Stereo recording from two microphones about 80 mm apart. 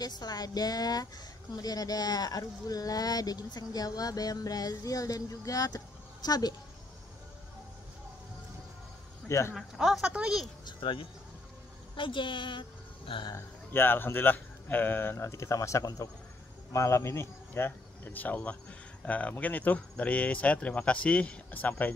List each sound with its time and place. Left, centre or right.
0.0 s speech: left
9.3 s speech: left
9.8 s speech: centre
10.6 s speech: left
13.7 s speech: left